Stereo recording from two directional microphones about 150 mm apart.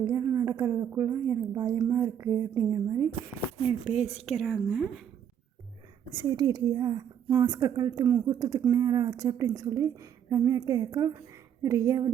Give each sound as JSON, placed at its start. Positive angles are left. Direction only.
{"t": 0.0, "sound": "a woman's voice", "side_deg": -20}
{"t": 3.6, "sound": "a woman's voice", "side_deg": -5}
{"t": 6.2, "sound": "a woman's voice", "side_deg": -25}
{"t": 7.3, "sound": "a woman's voice", "side_deg": -15}